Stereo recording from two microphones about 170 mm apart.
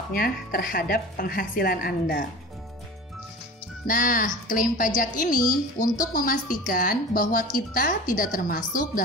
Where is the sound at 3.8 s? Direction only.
55° left (ahead or behind).